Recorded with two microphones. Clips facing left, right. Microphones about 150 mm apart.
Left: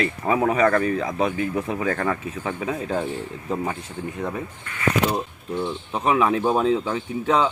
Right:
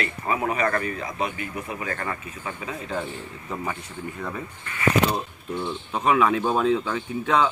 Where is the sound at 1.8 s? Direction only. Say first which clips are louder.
Left 7 dB; 90° left; by 2.7 s 75° left (ahead or behind).